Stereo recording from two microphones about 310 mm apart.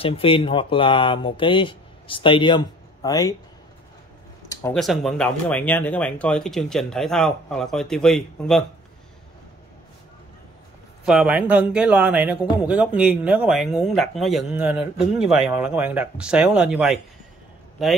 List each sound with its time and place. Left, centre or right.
0.0 s speech: centre
4.5 s speech: centre
11.1 s speech: centre